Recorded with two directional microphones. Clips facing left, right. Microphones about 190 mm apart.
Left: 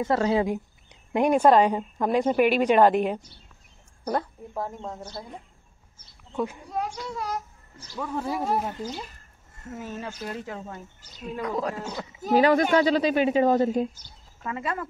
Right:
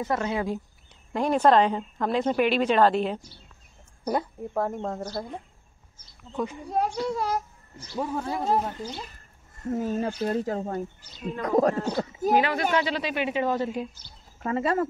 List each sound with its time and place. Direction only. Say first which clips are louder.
0.0 s speech: left 4 dB; 30° left (ahead or behind)
1.1 s a woman's voice: left 2 dB; 15° left (ahead or behind)
4.0 s a woman's voice: right 1 dB; 10° right (ahead or behind)
4.6 s speech: right 5 dB; 55° right (ahead or behind)
6.3 s a woman's voice: left 1 dB; 5° left (ahead or behind)
6.7 s speech: right 5 dB; 40° right (ahead or behind)
8.1 s a woman's voice: even; 5° left (ahead or behind)
9.7 s speech: right 8 dB; 35° right (ahead or behind)
12.4 s speech: left 7 dB; 40° left (ahead or behind)
14.4 s speech: right 6 dB; 35° right (ahead or behind)